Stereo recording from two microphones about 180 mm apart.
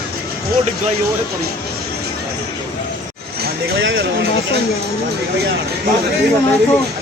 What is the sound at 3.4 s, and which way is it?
Speech, 90° right.